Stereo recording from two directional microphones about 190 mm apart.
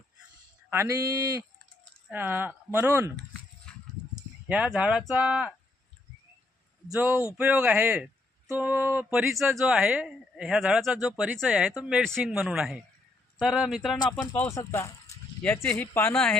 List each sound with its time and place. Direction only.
0.7 s speech: 15° right (ahead or behind)
3.7 s a sound: 5° right (ahead or behind)
6.9 s speech: 10° right (ahead or behind)
14.2 s speech: 10° left (ahead or behind)